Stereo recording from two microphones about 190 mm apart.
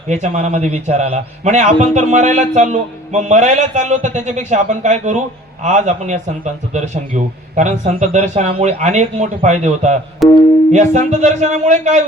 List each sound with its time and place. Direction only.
0.1 s a man's voice: 40° right (ahead or behind)
10.2 s speech: centre (ahead or behind)
10.7 s a man's voice: 40° right (ahead or behind)